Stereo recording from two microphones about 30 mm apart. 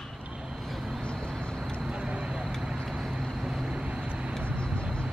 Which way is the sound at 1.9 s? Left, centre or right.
Right.